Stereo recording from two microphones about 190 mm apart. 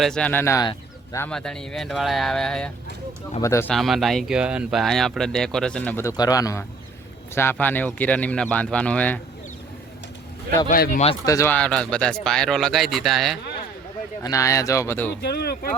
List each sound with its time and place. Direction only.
0.0 s speech: 5° left (ahead or behind)
3.4 s speech: 15° left (ahead or behind)
3.7 s speech: centre (ahead or behind)
10.7 s speech: 45° left (ahead or behind)
11.3 s speech: 15° left (ahead or behind)
14.2 s speech: 15° left (ahead or behind)
15.2 s speech: 55° left (ahead or behind)